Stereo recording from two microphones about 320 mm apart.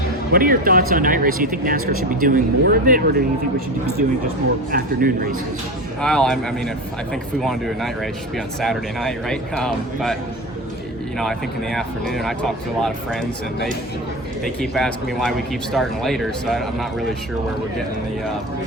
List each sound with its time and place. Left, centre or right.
0.3 s speech: right
4.7 s speech: right
6.0 s speech: centre
11.2 s speech: centre